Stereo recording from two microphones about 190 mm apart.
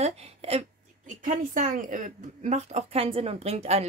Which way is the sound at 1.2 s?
45° right (ahead or behind).